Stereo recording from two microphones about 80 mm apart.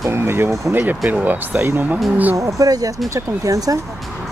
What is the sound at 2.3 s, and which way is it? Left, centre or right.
Speech, right.